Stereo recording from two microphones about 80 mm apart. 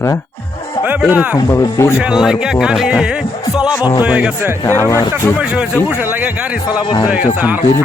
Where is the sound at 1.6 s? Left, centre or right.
Left.